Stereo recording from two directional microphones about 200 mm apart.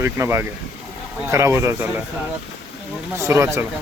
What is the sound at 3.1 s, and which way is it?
Speech, 15° right (ahead or behind).